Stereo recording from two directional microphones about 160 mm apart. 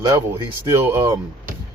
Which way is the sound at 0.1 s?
15° right (ahead or behind).